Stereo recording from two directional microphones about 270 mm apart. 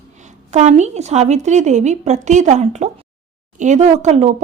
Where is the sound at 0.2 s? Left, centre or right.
Right.